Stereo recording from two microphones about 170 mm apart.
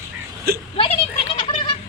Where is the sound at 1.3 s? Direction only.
30° left (ahead or behind).